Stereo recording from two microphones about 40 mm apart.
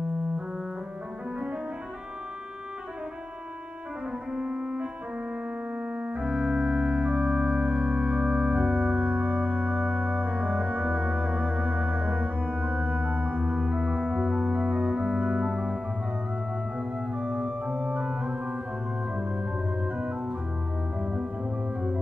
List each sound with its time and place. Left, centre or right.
4.3 s piano: right
5.9 s organ: right
13.5 s organ: right
17.1 s organ: right
18.2 s organ: right
21.0 s music: right